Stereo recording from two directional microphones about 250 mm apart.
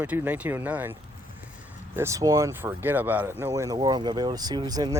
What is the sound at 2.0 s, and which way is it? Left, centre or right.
Speech, centre.